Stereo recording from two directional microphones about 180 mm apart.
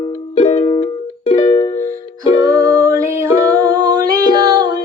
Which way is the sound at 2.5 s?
20° right (ahead or behind).